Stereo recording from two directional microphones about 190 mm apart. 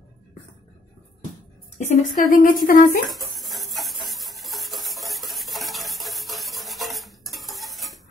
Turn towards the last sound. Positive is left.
turn(degrees=0)  # may be behind; listen again after turning